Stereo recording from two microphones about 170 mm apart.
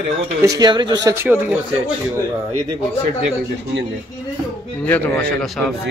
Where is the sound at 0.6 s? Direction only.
25° right (ahead or behind).